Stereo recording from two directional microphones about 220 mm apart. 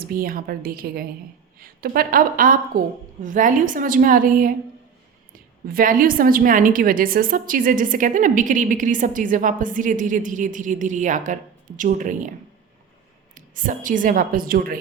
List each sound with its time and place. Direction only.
0.0 s a woman's voice: 40° right (ahead or behind)
13.3 s a woman's voice: 40° right (ahead or behind)